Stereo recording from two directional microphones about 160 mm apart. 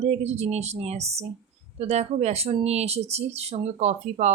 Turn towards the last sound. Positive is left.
turn(degrees=-40)  # may be behind; listen again after turning